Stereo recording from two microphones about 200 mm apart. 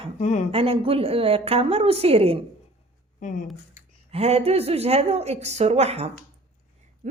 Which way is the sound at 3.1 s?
40° left (ahead or behind).